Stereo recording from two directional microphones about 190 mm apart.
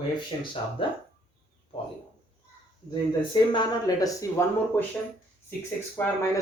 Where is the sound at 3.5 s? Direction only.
20° left (ahead or behind).